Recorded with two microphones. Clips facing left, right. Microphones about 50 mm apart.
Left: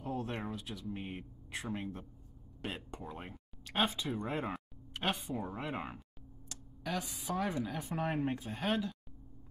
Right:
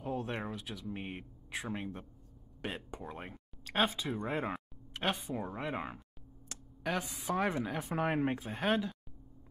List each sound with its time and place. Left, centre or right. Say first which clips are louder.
0.0 s a sound: right 1 dB; centre
1.8 s speech: even; centre
6.5 s speech: right 3 dB; right
7.6 s speech: right 2 dB; centre
7.9 s speech: right 3 dB; centre